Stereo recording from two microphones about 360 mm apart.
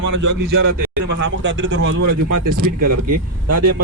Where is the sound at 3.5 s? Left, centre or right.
Right.